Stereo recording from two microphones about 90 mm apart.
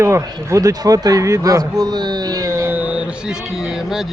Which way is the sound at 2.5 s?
30° right (ahead or behind).